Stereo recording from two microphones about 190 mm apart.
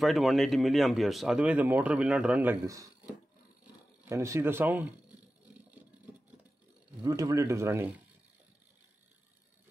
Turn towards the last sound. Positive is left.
turn(degrees=-15)  # may be behind; listen again after turning